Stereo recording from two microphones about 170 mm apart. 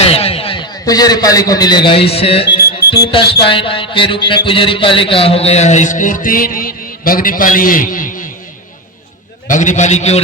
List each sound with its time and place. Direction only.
0.0 s a man's voice: 35° left (ahead or behind)
2.9 s music: 30° left (ahead or behind)
4.4 s a man's voice: 30° left (ahead or behind); by 8.3 s 50° left (ahead or behind)
9.5 s a man's voice: 45° left (ahead or behind)